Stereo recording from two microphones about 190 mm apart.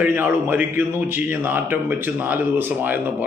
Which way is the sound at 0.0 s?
10° right (ahead or behind).